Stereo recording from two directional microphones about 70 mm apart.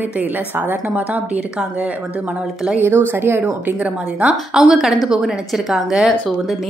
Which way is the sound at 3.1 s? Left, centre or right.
Right.